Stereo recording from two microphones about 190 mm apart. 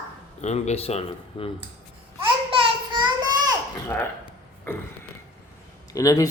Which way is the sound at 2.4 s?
25° right (ahead or behind).